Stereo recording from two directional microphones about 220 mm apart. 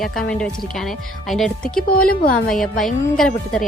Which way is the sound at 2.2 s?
40° left (ahead or behind).